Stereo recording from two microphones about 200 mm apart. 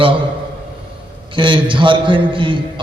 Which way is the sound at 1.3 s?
25° right (ahead or behind).